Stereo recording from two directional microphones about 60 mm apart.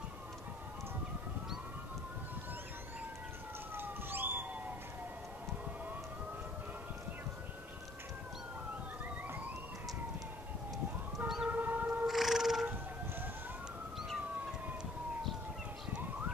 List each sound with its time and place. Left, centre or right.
3.7 s police car: right
11.1 s siren: centre
11.4 s siren: right
12.1 s cat: centre
13.9 s emergency vehicle: centre